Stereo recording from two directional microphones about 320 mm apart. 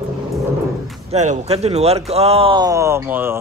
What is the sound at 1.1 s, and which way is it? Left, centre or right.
Speech, right.